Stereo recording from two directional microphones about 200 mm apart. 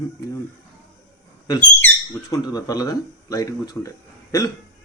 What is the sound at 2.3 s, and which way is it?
Speech, 20° left (ahead or behind).